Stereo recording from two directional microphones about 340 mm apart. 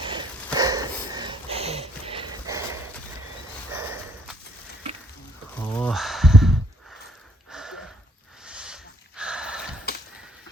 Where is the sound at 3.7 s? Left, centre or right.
Centre.